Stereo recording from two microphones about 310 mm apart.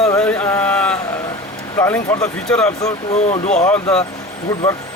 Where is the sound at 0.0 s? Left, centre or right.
Centre.